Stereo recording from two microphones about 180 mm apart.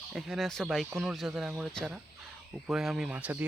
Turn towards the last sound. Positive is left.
turn(degrees=-10)  # may be behind; listen again after turning